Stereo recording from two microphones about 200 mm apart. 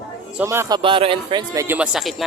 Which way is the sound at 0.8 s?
25° right (ahead or behind).